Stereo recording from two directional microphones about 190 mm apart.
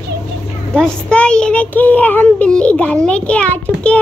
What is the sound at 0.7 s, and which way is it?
A child's voice, 5° left (ahead or behind).